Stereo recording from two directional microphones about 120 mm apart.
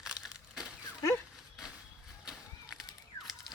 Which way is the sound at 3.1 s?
25° left (ahead or behind).